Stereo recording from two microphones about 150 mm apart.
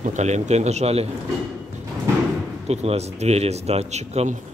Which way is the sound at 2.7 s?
45° right (ahead or behind).